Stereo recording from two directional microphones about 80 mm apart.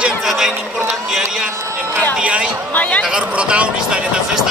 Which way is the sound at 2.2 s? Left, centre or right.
Centre.